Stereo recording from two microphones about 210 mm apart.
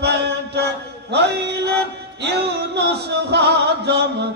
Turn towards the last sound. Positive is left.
turn(degrees=-55)  # may be behind; listen again after turning